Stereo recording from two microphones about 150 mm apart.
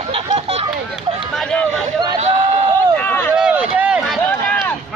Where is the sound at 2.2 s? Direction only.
50° right (ahead or behind).